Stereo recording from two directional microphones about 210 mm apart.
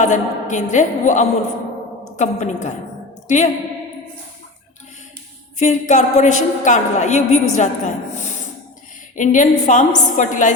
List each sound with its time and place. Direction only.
0.0 s a woman's voice: 35° left (ahead or behind)
5.5 s a woman's voice: 35° left (ahead or behind)
9.1 s a woman's voice: 35° left (ahead or behind)